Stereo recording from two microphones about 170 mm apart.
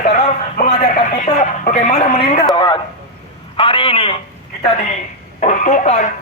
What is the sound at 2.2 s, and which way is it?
A man's voice, 30° left (ahead or behind).